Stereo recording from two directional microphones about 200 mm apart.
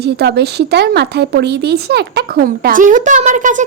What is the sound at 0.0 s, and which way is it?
Speech, 55° right (ahead or behind).